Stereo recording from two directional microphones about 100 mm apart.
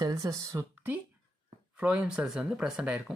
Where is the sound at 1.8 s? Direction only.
10° right (ahead or behind).